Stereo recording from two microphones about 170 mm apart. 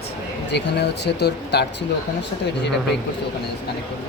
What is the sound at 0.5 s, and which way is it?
Speech, 85° left.